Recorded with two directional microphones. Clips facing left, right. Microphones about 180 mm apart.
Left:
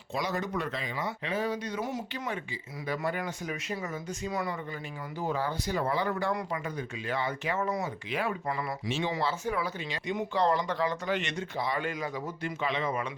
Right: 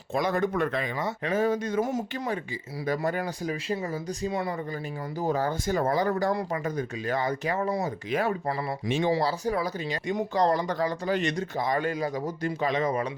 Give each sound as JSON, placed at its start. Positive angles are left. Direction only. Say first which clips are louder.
{"t": 0.1, "sound": "speech", "louder": "right 6 dB", "side_deg": -55}
{"t": 5.2, "sound": "speech", "louder": "right 4 dB", "side_deg": -40}